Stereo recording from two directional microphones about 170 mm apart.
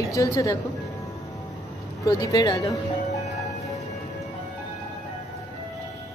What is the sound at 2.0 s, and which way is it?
Speech, 20° left (ahead or behind).